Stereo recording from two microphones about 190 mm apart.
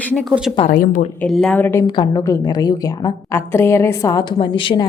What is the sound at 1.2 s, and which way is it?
A woman's voice, 5° left (ahead or behind).